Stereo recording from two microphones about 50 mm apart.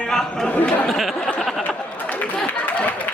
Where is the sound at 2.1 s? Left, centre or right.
Left.